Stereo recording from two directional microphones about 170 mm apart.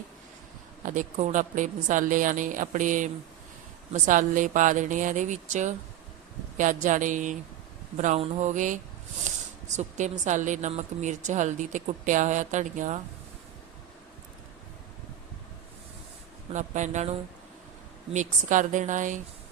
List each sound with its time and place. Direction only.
0.9 s speech: 50° right (ahead or behind)
16.5 s speech: 45° right (ahead or behind)